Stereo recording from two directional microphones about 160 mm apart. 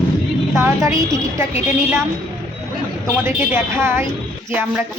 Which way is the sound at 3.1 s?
15° right (ahead or behind).